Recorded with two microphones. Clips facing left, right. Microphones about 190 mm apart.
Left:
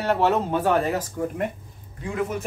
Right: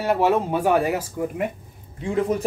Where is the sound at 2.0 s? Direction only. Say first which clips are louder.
Right 4 dB; 30° right (ahead or behind).